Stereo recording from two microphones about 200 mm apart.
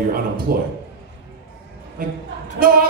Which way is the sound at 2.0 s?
45° right (ahead or behind).